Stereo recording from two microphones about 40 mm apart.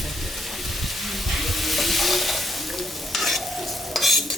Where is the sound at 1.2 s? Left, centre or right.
Centre.